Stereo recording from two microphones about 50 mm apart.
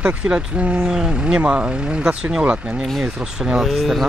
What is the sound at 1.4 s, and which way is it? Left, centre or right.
Speech, right.